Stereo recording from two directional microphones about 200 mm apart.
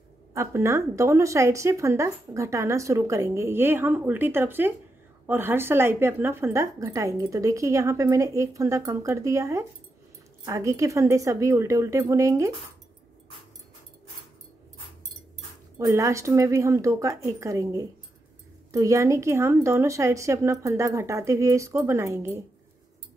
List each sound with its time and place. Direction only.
0.3 s speech: 15° right (ahead or behind)
15.8 s speech: 15° right (ahead or behind)